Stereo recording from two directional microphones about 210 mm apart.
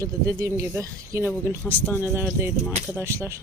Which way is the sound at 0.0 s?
15° right (ahead or behind).